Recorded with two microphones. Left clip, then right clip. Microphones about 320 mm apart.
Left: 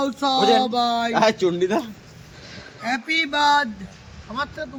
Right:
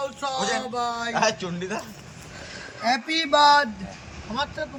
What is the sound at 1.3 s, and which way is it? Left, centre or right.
Speech, left.